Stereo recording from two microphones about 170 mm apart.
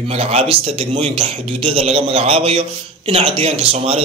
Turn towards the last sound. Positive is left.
turn(degrees=-35)  # may be behind; listen again after turning